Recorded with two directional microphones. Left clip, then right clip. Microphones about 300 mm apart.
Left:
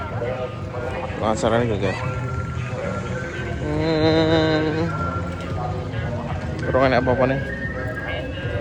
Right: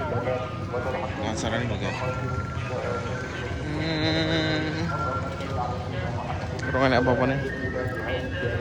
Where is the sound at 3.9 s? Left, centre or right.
Centre.